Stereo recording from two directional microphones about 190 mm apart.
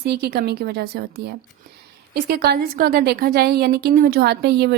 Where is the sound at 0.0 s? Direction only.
55° right (ahead or behind).